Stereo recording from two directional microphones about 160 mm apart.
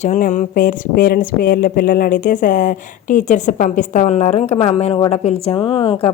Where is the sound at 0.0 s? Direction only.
45° left (ahead or behind).